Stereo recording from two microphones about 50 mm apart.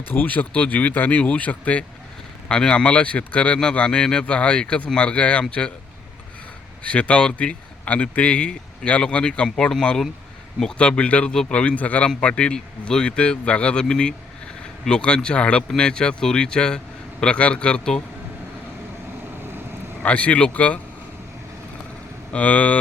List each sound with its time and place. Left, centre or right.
0.3 s speech: left
6.8 s speech: left
10.8 s a man's voice: left
19.4 s vehicle: right
20.0 s speech: left
22.3 s speech: left